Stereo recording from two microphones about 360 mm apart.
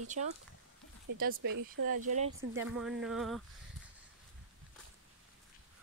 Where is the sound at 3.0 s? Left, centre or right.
Centre.